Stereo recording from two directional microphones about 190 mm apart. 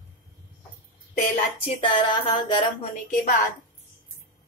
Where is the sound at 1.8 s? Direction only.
25° left (ahead or behind).